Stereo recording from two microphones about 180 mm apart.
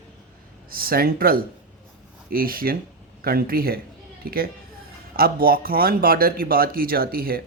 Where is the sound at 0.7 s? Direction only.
55° right (ahead or behind).